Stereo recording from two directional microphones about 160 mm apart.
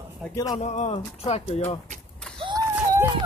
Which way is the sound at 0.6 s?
45° left (ahead or behind).